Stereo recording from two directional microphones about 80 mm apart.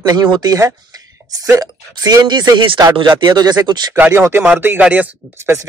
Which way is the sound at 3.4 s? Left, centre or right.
Right.